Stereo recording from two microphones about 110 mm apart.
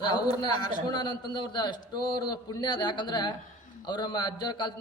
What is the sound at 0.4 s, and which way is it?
A man's voice, 40° left (ahead or behind).